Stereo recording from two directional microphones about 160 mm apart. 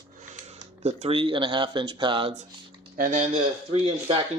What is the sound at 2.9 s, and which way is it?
Speech, 60° right (ahead or behind).